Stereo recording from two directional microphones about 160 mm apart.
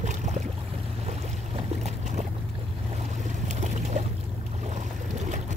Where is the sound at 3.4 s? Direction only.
45° right (ahead or behind).